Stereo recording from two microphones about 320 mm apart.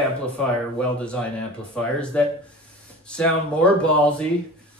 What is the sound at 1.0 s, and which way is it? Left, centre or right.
Speech, centre.